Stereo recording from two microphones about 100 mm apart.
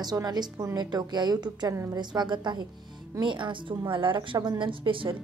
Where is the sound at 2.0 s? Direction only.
50° right (ahead or behind).